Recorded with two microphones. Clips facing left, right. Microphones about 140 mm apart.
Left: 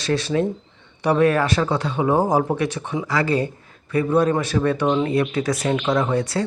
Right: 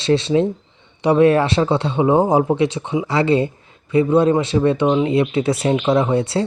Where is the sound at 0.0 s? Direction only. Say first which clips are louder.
Right 5 dB; 25° right (ahead or behind).